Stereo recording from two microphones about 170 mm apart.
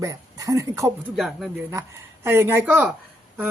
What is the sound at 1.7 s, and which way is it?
Speech, 15° right (ahead or behind).